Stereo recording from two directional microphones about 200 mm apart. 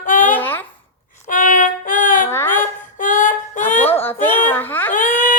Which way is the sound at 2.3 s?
10° left (ahead or behind).